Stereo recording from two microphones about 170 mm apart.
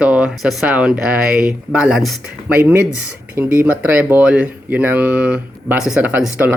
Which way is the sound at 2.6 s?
15° right (ahead or behind).